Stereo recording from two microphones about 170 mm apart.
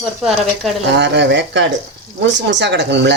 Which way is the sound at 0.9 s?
90° right.